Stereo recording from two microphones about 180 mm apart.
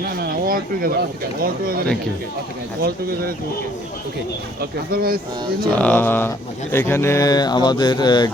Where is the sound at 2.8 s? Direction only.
55° right (ahead or behind).